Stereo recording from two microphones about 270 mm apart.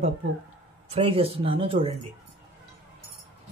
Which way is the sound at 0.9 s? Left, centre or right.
Right.